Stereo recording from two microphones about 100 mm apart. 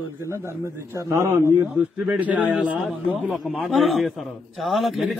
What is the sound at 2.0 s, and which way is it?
A man's voice, 15° right (ahead or behind).